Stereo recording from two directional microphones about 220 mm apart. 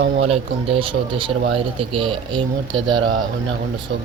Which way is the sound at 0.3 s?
25° right (ahead or behind).